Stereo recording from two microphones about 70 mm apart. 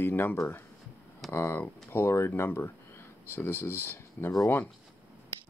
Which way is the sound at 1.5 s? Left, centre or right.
Left.